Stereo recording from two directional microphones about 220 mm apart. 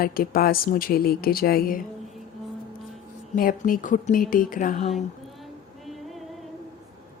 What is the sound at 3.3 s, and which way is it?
Speech, 40° left (ahead or behind).